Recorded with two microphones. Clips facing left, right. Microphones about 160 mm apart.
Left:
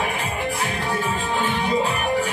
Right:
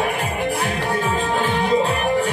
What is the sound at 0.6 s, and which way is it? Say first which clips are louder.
Music: right 3 dB; 55° right (ahead or behind).